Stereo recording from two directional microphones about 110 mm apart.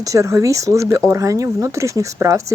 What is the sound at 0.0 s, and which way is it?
Speech, 30° right (ahead or behind).